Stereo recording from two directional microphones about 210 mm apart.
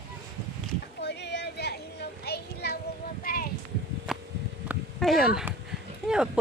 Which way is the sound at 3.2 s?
45° left (ahead or behind).